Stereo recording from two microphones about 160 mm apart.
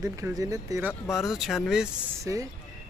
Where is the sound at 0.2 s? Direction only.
20° right (ahead or behind).